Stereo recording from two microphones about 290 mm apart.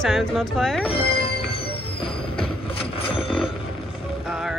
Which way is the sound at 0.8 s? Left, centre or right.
Centre.